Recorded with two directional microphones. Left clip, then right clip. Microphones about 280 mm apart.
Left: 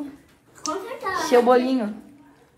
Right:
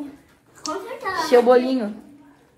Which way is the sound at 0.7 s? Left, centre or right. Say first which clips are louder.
Even; centre.